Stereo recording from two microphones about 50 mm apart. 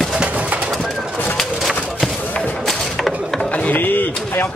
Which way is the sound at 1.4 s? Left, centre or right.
Centre.